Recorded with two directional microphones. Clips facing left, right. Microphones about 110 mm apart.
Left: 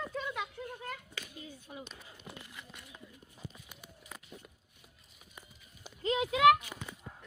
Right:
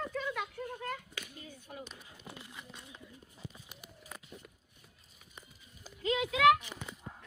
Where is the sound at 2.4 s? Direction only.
20° right (ahead or behind).